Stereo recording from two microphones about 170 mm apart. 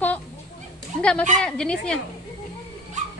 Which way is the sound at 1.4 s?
5° left (ahead or behind).